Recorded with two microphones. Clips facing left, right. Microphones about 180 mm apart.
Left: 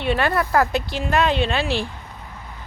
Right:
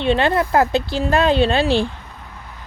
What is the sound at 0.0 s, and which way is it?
Speech, 25° right (ahead or behind).